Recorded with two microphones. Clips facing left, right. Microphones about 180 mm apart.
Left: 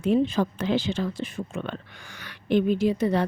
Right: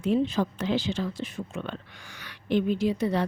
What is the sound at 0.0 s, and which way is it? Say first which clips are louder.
Speech: left 2 dB; 55° left (ahead or behind).